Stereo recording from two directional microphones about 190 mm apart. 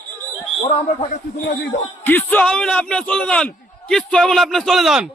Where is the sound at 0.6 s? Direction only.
30° left (ahead or behind).